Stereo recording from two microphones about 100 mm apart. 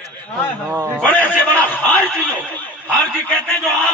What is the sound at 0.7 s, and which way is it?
Speech, 25° right (ahead or behind).